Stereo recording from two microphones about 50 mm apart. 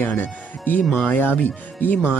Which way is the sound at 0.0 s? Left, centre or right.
Left.